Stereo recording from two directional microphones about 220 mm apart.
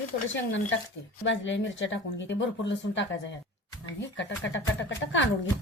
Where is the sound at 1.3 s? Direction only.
55° left (ahead or behind).